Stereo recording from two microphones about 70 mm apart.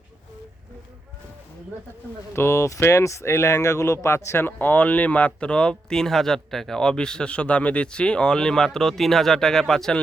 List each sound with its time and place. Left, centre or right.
2.3 s speech: left; by 9.9 s centre